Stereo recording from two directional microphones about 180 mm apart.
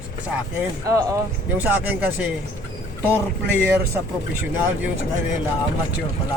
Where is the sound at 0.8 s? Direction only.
20° right (ahead or behind).